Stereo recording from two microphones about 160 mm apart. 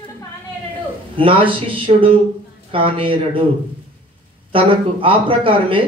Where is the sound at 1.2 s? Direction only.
35° right (ahead or behind).